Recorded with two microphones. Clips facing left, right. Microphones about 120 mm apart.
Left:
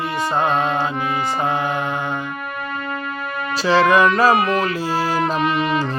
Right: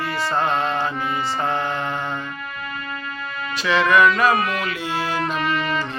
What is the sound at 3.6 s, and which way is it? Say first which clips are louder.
Music: left 2 dB; 35° left (ahead or behind).